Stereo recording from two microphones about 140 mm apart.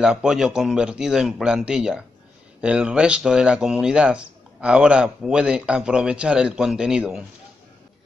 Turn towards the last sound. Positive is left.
turn(degrees=-5)  # may be behind; listen again after turning